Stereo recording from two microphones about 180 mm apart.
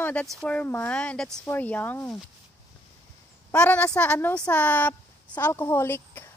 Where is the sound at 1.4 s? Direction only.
10° left (ahead or behind).